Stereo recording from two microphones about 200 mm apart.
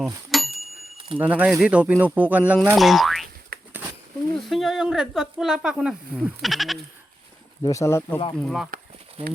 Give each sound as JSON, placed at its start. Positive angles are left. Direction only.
{"t": 0.0, "sound": "a sound", "side_deg": 0}
{"t": 0.9, "sound": "a sound", "side_deg": -25}
{"t": 1.2, "sound": "speech", "side_deg": -5}
{"t": 2.5, "sound": "boing", "side_deg": -5}
{"t": 3.5, "sound": "a sound", "side_deg": -50}
{"t": 4.4, "sound": "speech", "side_deg": 0}
{"t": 7.6, "sound": "speech", "side_deg": 15}
{"t": 8.4, "sound": "speech", "side_deg": 0}
{"t": 9.2, "sound": "speech", "side_deg": -30}